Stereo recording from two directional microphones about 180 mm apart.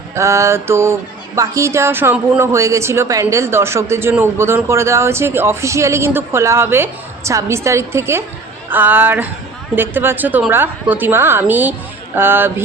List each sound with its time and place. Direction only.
0.2 s speech: 15° right (ahead or behind)